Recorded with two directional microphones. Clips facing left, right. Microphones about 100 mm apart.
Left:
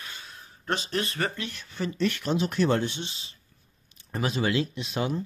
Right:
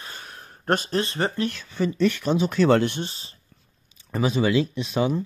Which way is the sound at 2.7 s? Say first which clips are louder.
Right 7 dB; 80° right.